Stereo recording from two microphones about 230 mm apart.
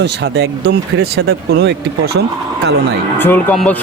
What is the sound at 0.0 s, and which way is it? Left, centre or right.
Speech, right.